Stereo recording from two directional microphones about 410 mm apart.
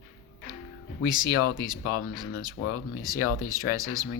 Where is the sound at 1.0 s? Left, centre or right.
Centre.